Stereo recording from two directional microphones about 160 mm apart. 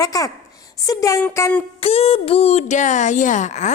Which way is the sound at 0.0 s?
20° left (ahead or behind).